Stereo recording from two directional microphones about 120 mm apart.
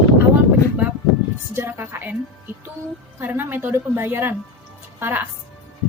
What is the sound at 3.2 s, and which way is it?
A woman's voice, 15° right (ahead or behind).